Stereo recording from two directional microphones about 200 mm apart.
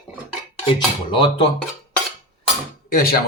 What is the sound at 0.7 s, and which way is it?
Cutlery, 25° left (ahead or behind).